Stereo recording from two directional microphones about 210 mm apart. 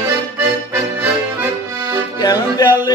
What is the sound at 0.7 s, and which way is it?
Accordion, 10° right (ahead or behind).